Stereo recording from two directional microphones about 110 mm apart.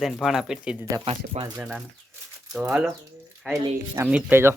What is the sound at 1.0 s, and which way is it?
Speech, 55° right (ahead or behind).